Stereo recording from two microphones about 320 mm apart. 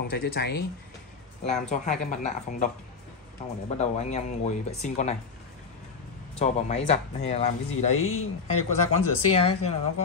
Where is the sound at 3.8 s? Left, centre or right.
Left.